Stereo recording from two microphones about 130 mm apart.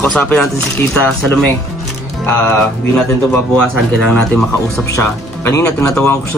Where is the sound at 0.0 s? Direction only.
10° left (ahead or behind).